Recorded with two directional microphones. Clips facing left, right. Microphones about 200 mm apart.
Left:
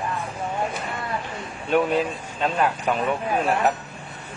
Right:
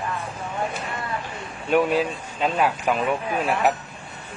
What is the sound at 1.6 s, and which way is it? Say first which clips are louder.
Speech: right 1 dB; 5° right (ahead or behind).